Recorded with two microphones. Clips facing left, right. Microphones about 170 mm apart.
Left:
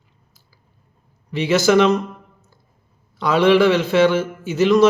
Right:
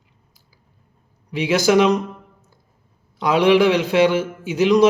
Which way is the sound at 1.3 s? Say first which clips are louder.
Left 1 dB; 10° right (ahead or behind).